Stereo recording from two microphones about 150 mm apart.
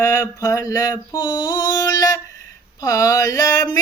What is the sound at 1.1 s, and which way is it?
Mantra, 30° left (ahead or behind).